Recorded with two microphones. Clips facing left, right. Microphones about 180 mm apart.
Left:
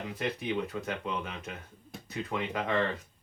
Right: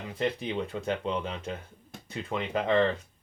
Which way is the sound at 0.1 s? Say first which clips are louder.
Right 4 dB; 30° right (ahead or behind).